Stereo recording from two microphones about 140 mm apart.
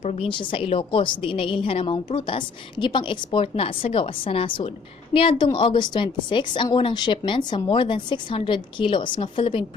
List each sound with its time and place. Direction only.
0.0 s a woman's voice: 50° left (ahead or behind)
0.3 s a woman's voice: 40° left (ahead or behind)